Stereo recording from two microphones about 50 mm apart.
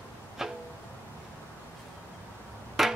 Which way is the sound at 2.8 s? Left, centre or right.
Centre.